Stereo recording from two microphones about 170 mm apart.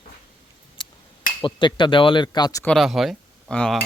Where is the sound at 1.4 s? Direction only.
30° left (ahead or behind).